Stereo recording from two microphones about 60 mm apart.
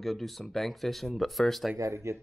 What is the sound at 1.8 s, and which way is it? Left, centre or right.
Speech, right.